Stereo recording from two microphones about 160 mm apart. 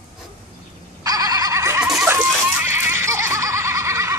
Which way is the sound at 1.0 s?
20° right (ahead or behind).